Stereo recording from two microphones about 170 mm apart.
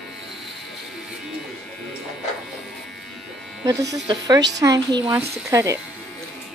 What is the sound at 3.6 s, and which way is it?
A woman's voice, 20° right (ahead or behind).